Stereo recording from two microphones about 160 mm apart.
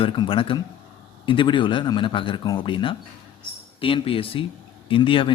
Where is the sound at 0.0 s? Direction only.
35° left (ahead or behind).